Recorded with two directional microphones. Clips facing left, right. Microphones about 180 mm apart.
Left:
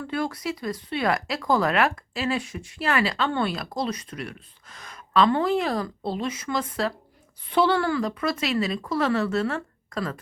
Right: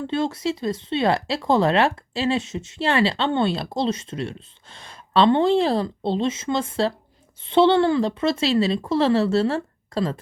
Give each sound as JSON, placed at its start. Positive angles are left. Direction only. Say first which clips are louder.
{"t": 0.0, "sound": "speech", "louder": "right 5 dB", "side_deg": -25}